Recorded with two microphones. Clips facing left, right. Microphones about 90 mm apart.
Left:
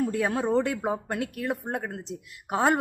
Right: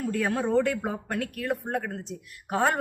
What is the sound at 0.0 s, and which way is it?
A woman's voice, 20° left (ahead or behind).